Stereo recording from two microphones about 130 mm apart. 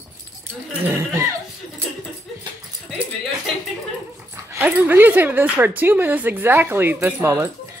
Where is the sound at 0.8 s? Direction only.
20° right (ahead or behind).